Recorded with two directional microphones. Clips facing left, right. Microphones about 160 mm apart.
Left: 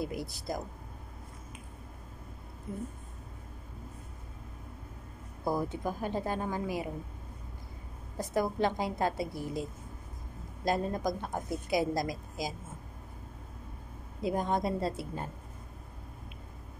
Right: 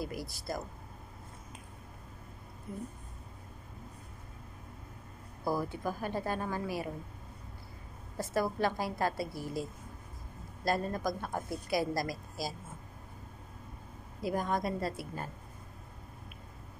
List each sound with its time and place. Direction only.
0.0 s a woman's voice: 20° left (ahead or behind)
5.4 s a woman's voice: 20° left (ahead or behind)
8.2 s a woman's voice: 15° left (ahead or behind)
14.2 s a woman's voice: 25° left (ahead or behind)